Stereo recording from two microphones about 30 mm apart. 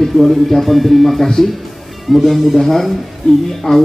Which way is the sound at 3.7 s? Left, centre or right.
Left.